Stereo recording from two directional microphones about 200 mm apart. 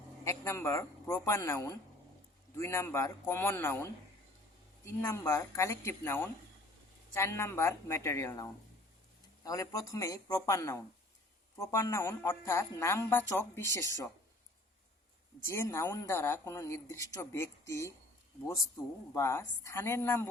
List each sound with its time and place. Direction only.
0.3 s a woman's voice: 15° left (ahead or behind)
15.4 s a woman's voice: 15° left (ahead or behind)
19.1 s a woman's voice: 15° left (ahead or behind)